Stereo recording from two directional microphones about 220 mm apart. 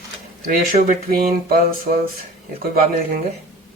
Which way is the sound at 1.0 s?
40° right (ahead or behind).